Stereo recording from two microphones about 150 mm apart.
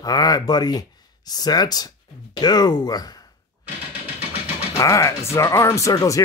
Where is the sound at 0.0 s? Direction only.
25° left (ahead or behind).